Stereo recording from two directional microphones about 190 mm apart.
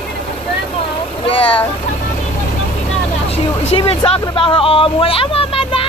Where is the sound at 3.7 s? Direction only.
30° left (ahead or behind).